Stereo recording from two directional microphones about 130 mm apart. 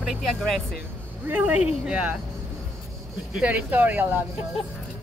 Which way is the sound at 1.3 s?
10° right (ahead or behind).